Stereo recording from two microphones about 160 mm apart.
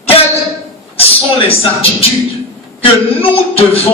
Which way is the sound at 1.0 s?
35° left (ahead or behind).